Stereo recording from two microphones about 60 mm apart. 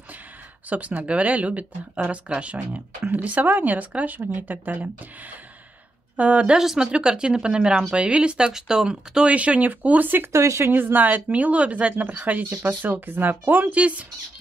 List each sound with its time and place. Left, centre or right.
0.7 s speech: right
6.1 s speech: right
6.6 s speech: centre; by 10.3 s right
10.3 s speech: right
10.7 s speech: right